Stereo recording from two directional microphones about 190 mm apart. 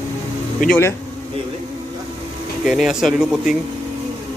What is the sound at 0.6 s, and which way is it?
Speech, 5° left (ahead or behind).